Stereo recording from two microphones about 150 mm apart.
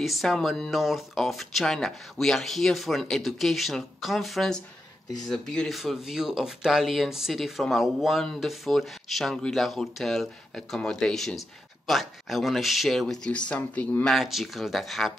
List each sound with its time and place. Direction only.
0.0 s speech: centre (ahead or behind)